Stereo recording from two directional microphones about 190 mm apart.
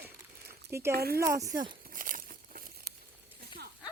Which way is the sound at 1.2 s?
15° right (ahead or behind).